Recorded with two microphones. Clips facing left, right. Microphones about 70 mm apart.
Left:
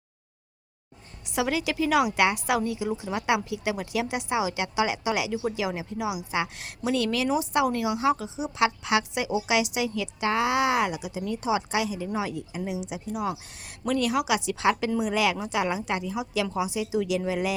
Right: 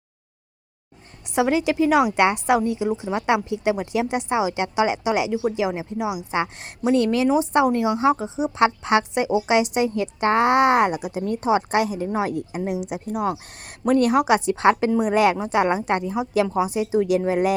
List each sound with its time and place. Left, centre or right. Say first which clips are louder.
1.4 s a woman's voice: right 7 dB; right